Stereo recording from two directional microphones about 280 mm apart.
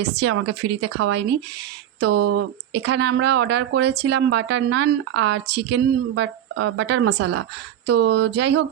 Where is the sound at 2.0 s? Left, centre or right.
Right.